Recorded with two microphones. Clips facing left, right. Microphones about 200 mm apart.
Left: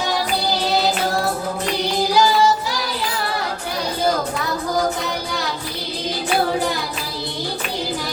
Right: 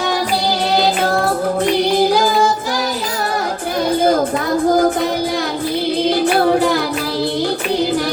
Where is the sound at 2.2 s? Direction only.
50° right (ahead or behind).